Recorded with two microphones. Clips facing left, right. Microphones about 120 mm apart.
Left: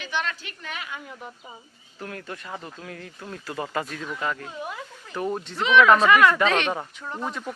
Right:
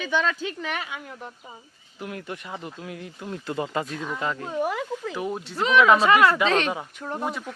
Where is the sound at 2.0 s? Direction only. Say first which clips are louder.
Right 2 dB; 15° right (ahead or behind).